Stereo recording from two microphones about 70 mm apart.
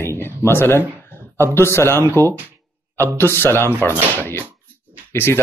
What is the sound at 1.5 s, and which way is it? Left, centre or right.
Speech, left.